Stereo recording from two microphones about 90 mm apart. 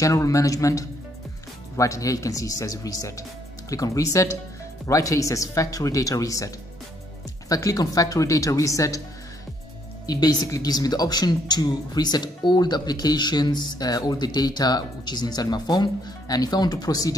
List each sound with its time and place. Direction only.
0.0 s speech: 35° left (ahead or behind)
10.0 s a woman's voice: 45° left (ahead or behind)